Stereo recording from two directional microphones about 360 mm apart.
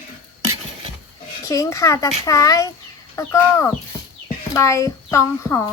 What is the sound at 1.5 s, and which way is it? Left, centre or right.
A child's voice, centre.